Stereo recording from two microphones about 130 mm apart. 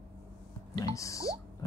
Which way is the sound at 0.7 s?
25° left (ahead or behind).